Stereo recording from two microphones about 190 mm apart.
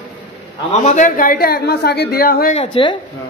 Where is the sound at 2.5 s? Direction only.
30° left (ahead or behind).